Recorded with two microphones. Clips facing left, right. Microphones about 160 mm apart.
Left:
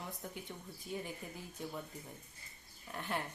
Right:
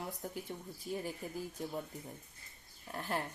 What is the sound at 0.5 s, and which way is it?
Speech, 30° right (ahead or behind).